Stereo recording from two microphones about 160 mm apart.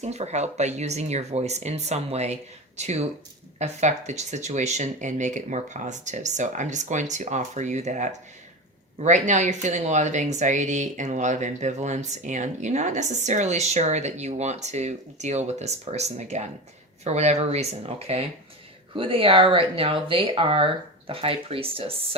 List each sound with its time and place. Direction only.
0.0 s speech: 45° right (ahead or behind)